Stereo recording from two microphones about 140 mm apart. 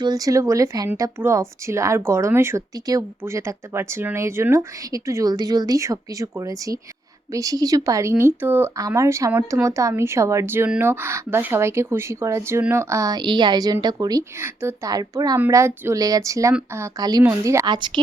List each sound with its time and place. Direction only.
0.0 s speech: 25° right (ahead or behind)
17.7 s speech: 35° right (ahead or behind)